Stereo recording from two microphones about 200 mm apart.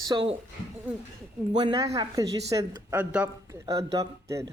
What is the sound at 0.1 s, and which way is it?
Speech, 25° right (ahead or behind).